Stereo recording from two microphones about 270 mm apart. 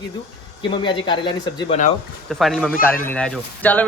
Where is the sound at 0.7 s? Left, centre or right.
Centre.